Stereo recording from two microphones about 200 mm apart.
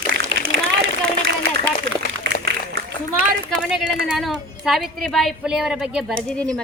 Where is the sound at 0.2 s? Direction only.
80° right.